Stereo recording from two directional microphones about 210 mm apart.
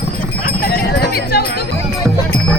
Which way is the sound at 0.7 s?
50° left (ahead or behind).